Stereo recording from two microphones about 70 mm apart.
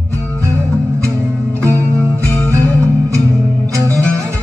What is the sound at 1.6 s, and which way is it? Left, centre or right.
Music, right.